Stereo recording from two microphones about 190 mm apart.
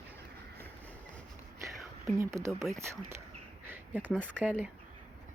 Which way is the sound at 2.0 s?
15° right (ahead or behind).